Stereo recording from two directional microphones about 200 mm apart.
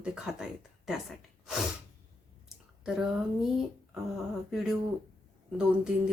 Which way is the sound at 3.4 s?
Centre (ahead or behind).